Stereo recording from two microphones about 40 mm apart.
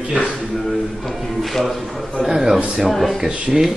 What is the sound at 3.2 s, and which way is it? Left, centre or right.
Speech, centre.